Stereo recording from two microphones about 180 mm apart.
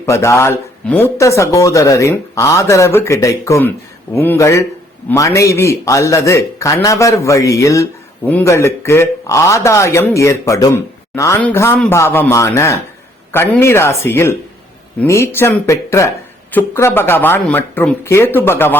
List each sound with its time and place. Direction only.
0.0 s a man's voice: 15° left (ahead or behind)